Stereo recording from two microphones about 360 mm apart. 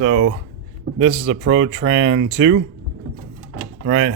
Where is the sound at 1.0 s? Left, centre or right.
Right.